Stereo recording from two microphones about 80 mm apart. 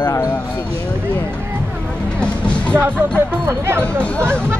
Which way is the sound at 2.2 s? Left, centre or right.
Centre.